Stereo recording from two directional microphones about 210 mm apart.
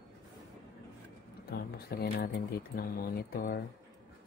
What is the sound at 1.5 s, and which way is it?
Speech, 50° left (ahead or behind).